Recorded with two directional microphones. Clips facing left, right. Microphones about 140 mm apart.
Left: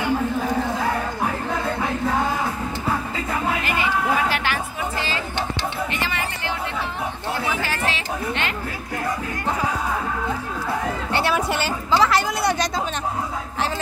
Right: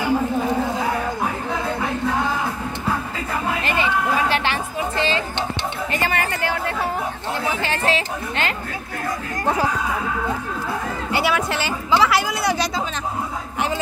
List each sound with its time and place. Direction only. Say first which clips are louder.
0.0 s a sound: right 2 dB; 10° right (ahead or behind)
4.3 s music: right 2 dB; 25° right (ahead or behind)
5.9 s music: right 4 dB; 45° right (ahead or behind)
7.6 s chatter: right 4 dB; 30° right (ahead or behind)
11.1 s a sound: right 2 dB; 5° right (ahead or behind)
11.3 s speech: even; centre (ahead or behind)